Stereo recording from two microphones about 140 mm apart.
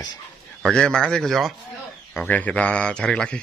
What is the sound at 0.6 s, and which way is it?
Speech, 5° left (ahead or behind).